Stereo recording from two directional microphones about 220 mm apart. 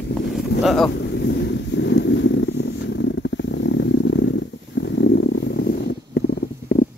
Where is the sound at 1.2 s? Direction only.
50° left (ahead or behind).